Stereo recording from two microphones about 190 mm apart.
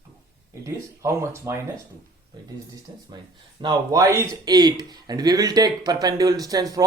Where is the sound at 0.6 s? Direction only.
15° right (ahead or behind).